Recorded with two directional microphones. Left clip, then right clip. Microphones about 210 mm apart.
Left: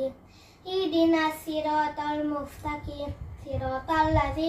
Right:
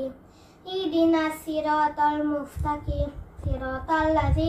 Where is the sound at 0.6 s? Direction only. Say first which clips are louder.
Right 1 dB; 15° left (ahead or behind).